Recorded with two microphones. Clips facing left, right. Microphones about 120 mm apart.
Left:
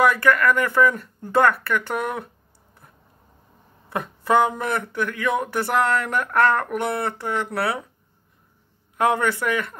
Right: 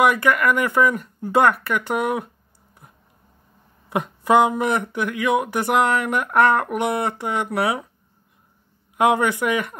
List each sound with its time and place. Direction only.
0.0 s speech: 15° right (ahead or behind)
3.9 s speech: 15° right (ahead or behind)
8.9 s speech: 15° right (ahead or behind)